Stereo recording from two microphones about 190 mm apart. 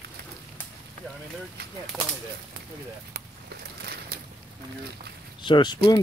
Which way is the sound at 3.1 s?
55° right (ahead or behind).